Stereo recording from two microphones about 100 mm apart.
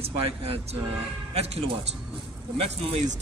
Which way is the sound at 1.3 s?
90° right.